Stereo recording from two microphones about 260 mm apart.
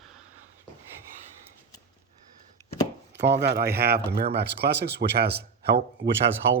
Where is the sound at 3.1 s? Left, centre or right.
Right.